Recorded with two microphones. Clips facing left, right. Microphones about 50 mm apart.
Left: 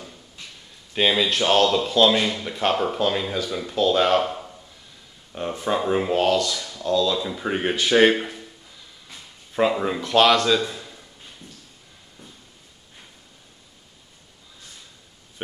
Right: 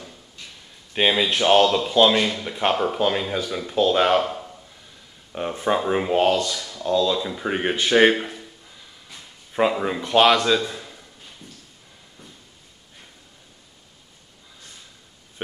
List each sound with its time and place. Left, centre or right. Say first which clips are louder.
0.9 s speech: even; centre
2.2 s speech: even; centre
2.5 s speech: right 1 dB; centre
4.2 s a sound: even; centre
5.3 s speech: right 2 dB; centre
7.1 s speech: right 1 dB; centre
9.5 s speech: even; centre
10.7 s a sound: right 1 dB; centre